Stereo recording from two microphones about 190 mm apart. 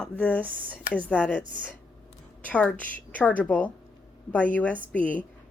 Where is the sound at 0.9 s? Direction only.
5° left (ahead or behind).